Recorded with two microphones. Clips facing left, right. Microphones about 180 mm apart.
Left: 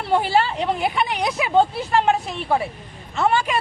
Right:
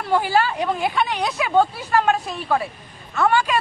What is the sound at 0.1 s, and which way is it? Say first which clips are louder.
A man's voice: even; 25° left (ahead or behind).